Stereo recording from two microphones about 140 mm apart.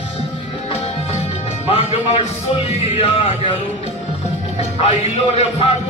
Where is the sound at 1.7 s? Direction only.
50° left (ahead or behind).